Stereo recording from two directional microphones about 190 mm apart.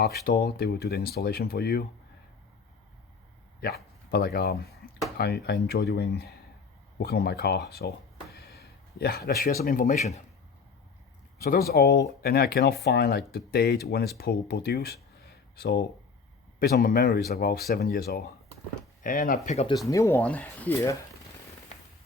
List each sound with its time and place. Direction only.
0.0 s speech: 55° left (ahead or behind)
4.1 s speech: 55° left (ahead or behind); by 10.2 s 40° left (ahead or behind)
11.7 s speech: 55° left (ahead or behind)
19.9 s speech: 15° left (ahead or behind)